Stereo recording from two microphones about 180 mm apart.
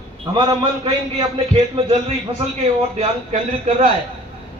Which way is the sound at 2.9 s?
40° right (ahead or behind).